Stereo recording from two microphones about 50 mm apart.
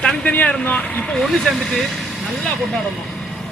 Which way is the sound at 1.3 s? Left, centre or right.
Centre.